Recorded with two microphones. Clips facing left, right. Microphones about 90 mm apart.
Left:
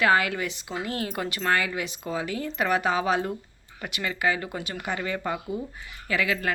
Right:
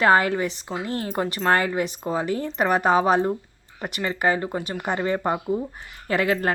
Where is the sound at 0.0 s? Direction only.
40° right (ahead or behind).